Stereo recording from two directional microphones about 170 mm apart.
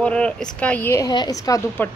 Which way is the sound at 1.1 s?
25° left (ahead or behind).